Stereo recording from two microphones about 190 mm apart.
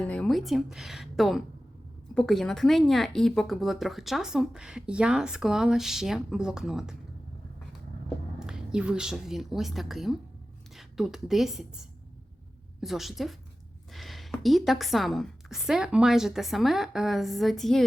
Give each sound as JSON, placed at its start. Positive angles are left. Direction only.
{"t": 0.0, "sound": "a woman's voice", "side_deg": 5}
{"t": 8.4, "sound": "a woman's voice", "side_deg": -5}
{"t": 12.8, "sound": "a woman's voice", "side_deg": 0}